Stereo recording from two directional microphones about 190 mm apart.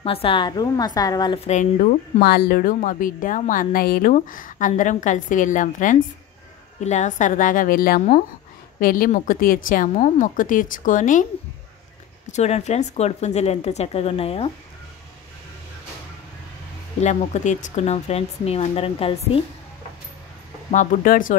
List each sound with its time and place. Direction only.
0.0 s a woman's voice: 30° left (ahead or behind)
1.5 s speech: 40° left (ahead or behind)
2.1 s a woman's voice: 55° left (ahead or behind)
12.3 s speech: 35° left (ahead or behind)
17.0 s speech: 35° left (ahead or behind)
20.7 s a woman's voice: 40° left (ahead or behind)